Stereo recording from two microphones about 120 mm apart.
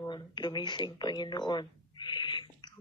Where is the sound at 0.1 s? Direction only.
35° left (ahead or behind).